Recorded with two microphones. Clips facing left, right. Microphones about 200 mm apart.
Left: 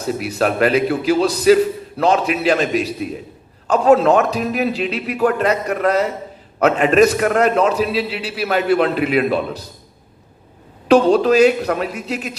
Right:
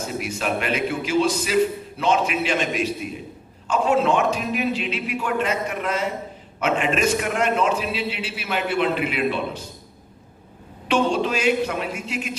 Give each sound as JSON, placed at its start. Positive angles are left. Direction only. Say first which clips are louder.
{"t": 0.0, "sound": "a man's voice", "louder": "left 7 dB", "side_deg": 35}
{"t": 10.8, "sound": "a man's voice", "louder": "left 9 dB", "side_deg": 40}